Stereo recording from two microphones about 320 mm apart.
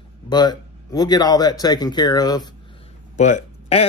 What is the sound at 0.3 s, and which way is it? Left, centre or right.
Speech, centre.